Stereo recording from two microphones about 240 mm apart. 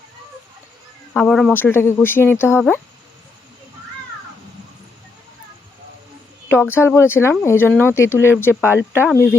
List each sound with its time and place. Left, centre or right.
1.1 s speech: centre
6.5 s speech: centre